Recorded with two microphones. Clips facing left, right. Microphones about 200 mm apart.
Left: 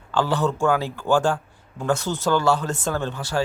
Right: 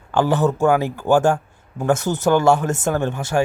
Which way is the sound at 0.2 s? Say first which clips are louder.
Right 4 dB; 15° right (ahead or behind).